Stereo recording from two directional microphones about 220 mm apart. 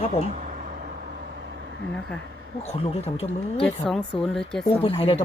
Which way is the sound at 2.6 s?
30° left (ahead or behind).